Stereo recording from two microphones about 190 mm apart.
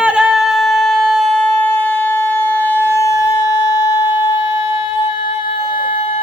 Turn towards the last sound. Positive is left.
turn(degrees=20)  # may be behind; listen again after turning